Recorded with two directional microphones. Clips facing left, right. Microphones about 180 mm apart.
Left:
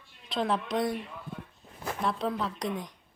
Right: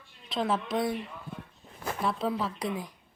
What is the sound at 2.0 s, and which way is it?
Speech, 5° right (ahead or behind).